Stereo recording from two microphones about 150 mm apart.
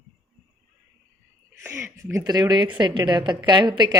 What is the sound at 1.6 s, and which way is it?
A woman's voice, 15° right (ahead or behind).